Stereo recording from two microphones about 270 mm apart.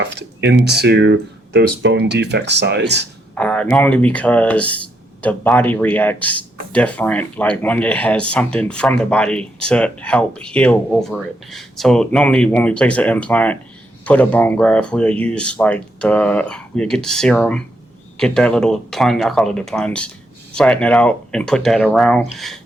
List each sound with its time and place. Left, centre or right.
0.0 s speech: right
3.3 s speech: centre